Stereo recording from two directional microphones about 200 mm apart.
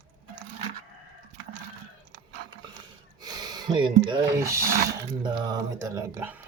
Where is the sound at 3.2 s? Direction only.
20° right (ahead or behind).